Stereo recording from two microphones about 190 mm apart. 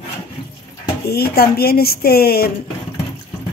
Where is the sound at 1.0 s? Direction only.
55° left (ahead or behind).